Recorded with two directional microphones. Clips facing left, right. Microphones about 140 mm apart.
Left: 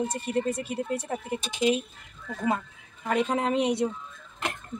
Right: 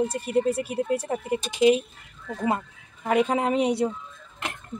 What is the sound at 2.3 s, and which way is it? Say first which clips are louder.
Speech: right 2 dB; 20° right (ahead or behind).